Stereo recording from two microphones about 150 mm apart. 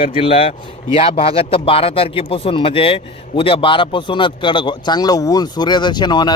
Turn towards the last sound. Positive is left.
turn(degrees=30)  # may be behind; listen again after turning